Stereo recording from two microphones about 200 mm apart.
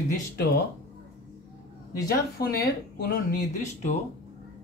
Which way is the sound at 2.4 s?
50° left (ahead or behind).